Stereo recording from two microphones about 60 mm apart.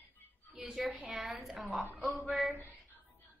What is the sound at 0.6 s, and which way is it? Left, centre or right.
A woman's voice, centre.